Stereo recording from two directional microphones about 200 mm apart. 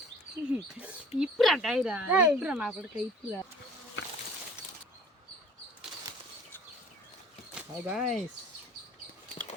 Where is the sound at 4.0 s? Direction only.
65° left (ahead or behind).